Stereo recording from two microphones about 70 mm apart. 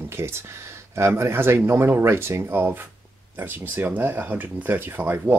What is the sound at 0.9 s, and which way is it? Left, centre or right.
Speech, right.